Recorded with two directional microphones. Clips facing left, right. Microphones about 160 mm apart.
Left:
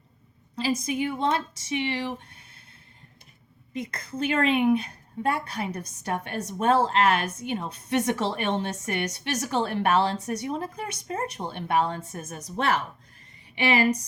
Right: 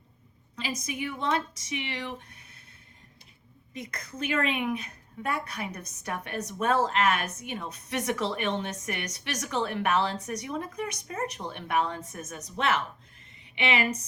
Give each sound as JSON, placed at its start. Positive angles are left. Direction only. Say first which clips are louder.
{"t": 0.5, "sound": "a woman's voice", "louder": "left 8 dB", "side_deg": 30}
{"t": 3.8, "sound": "a woman's voice", "louder": "left 6 dB", "side_deg": 30}